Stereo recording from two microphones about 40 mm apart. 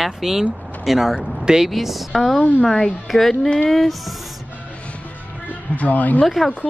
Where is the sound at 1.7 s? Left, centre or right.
Centre.